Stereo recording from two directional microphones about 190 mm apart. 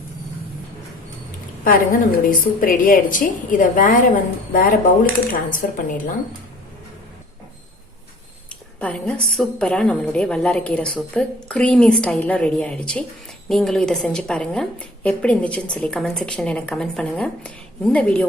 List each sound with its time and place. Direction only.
1.6 s a woman's voice: 45° left (ahead or behind)
8.8 s a woman's voice: 5° left (ahead or behind)